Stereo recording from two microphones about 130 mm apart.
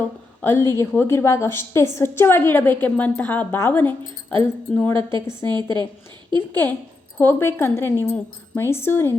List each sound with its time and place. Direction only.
0.4 s a woman's voice: 20° left (ahead or behind)
4.9 s a woman's voice: 40° right (ahead or behind)
6.5 s a woman's voice: 15° left (ahead or behind)